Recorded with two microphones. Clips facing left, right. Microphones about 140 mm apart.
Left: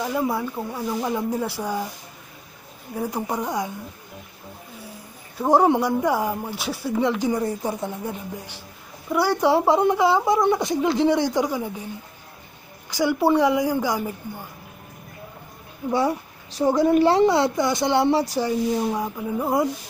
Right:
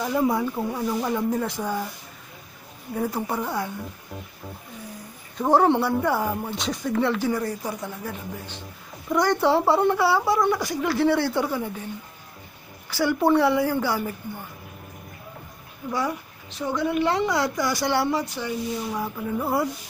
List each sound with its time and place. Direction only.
0.0 s speech: 5° left (ahead or behind)
2.9 s speech: 10° left (ahead or behind)
5.4 s speech: 10° left (ahead or behind)
9.1 s speech: 10° left (ahead or behind)
12.9 s speech: 15° left (ahead or behind)
15.9 s a child's voice: 30° left (ahead or behind)
18.2 s speech: 35° left (ahead or behind)
18.9 s speech: 15° left (ahead or behind)